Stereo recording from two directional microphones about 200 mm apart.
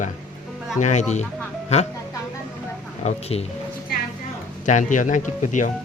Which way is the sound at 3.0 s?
30° left (ahead or behind).